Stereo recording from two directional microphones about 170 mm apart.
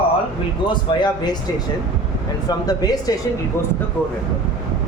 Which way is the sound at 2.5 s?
25° left (ahead or behind).